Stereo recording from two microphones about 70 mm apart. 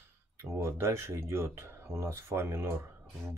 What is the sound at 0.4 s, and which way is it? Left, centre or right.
Speech, right.